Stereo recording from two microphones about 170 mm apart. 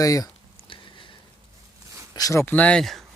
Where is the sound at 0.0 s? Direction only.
20° left (ahead or behind).